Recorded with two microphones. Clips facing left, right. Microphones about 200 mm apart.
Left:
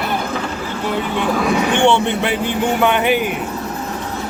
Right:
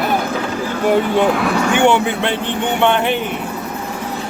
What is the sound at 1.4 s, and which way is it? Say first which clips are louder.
Speech: even; 10° right (ahead or behind).